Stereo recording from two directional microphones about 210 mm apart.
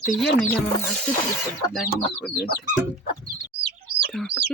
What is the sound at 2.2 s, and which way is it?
Speech, centre (ahead or behind).